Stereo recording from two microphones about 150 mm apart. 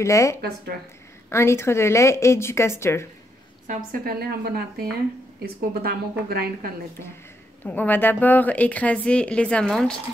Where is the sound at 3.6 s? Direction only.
65° right (ahead or behind); by 6.7 s 90° right.